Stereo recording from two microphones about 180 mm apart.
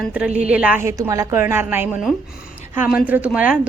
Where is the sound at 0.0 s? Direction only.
5° right (ahead or behind).